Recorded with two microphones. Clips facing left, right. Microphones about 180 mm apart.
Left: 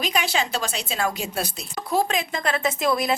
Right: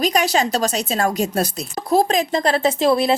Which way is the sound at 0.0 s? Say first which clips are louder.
Right 7 dB; 40° right (ahead or behind).